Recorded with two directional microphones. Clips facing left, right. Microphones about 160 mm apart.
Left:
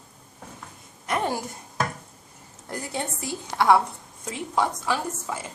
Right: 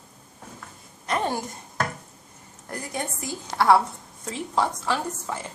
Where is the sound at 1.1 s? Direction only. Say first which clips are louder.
Even; 10° left (ahead or behind).